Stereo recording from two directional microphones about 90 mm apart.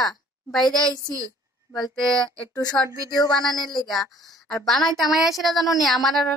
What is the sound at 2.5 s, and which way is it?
Speech, 45° left (ahead or behind).